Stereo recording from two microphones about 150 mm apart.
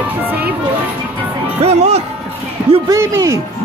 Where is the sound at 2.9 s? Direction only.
20° right (ahead or behind).